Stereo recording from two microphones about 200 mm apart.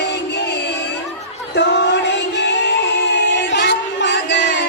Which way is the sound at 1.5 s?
60° left (ahead or behind).